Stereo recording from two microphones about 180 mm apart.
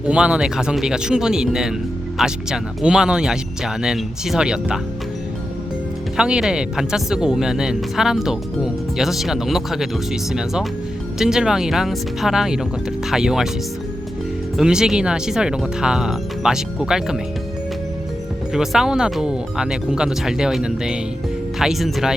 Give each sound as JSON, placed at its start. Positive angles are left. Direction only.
{"t": 0.0, "sound": "speech", "side_deg": -5}
{"t": 6.1, "sound": "speech", "side_deg": -5}
{"t": 14.5, "sound": "speech", "side_deg": -5}
{"t": 18.5, "sound": "speech", "side_deg": 0}